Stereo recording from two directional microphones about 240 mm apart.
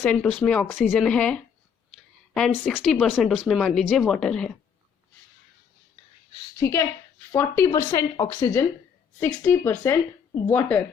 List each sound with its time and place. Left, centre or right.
0.0 s speech: centre
1.9 s a sound: centre
2.6 s speech: centre
6.6 s speech: centre